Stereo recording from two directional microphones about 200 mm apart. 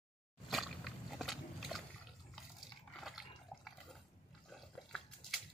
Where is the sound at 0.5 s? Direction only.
Centre (ahead or behind).